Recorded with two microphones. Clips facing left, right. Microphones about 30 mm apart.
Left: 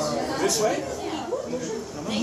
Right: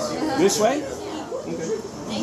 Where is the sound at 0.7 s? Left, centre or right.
Centre.